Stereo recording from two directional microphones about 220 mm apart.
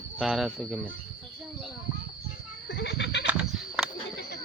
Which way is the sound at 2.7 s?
50° left (ahead or behind).